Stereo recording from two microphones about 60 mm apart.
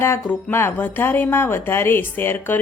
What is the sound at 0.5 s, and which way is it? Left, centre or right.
Speech, left.